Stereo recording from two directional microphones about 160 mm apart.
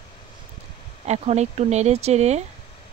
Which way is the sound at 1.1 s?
45° right (ahead or behind).